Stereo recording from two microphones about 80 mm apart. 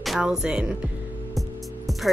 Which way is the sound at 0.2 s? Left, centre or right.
Centre.